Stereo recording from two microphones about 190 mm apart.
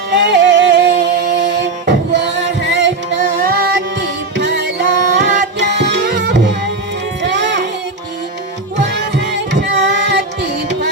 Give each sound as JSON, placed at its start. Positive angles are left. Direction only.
{"t": 0.1, "sound": "music", "side_deg": -65}
{"t": 3.2, "sound": "music", "side_deg": -50}
{"t": 4.0, "sound": "music", "side_deg": -70}
{"t": 5.5, "sound": "tabla", "side_deg": -65}
{"t": 7.2, "sound": "music", "side_deg": -65}
{"t": 8.8, "sound": "music", "side_deg": -65}